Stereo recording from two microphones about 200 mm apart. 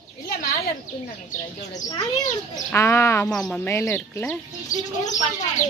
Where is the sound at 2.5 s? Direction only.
15° left (ahead or behind).